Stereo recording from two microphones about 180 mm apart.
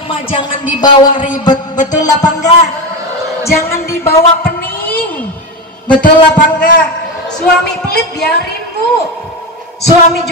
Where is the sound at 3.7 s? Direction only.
15° left (ahead or behind).